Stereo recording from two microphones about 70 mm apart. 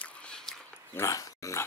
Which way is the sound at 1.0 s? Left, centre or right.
Left.